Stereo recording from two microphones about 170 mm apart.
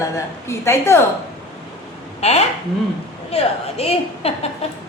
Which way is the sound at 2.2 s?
40° left (ahead or behind).